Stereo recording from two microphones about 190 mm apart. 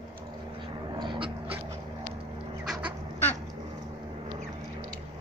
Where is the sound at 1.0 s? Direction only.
25° right (ahead or behind).